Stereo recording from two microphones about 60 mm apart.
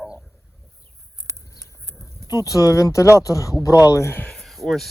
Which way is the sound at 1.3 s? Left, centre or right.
Right.